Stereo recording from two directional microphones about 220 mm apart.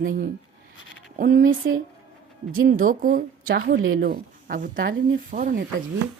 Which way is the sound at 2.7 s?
40° right (ahead or behind).